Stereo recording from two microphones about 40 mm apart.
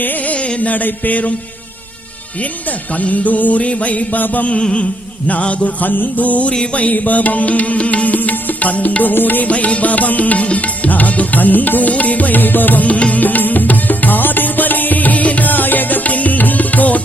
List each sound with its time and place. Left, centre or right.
0.0 s music: left
0.3 s music: left
2.9 s music: left
4.6 s music: left
5.6 s music: left
6.5 s music: left
6.9 s music: left
9.5 s music: left
13.2 s music: left